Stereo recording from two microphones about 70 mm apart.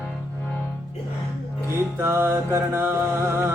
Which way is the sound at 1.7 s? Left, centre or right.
Right.